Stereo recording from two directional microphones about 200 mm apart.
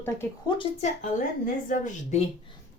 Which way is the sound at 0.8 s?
40° left (ahead or behind).